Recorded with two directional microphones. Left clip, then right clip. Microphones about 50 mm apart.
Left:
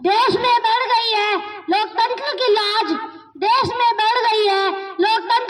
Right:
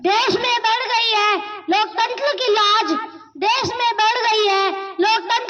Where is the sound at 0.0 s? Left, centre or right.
Right.